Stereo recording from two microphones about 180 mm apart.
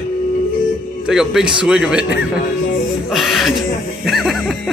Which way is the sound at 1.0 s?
5° right (ahead or behind).